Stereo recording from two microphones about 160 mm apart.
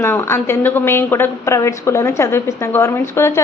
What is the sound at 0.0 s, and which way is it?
A woman's voice, 15° left (ahead or behind).